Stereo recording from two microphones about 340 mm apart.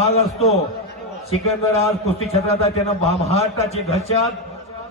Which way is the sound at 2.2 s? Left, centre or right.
Centre.